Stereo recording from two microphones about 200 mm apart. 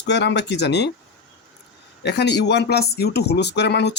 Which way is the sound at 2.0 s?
60° left (ahead or behind).